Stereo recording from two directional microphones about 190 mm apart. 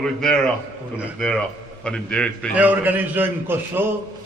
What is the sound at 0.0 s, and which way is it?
A man's voice, 5° left (ahead or behind).